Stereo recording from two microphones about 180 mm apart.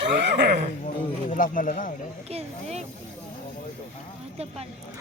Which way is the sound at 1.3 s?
50° left (ahead or behind).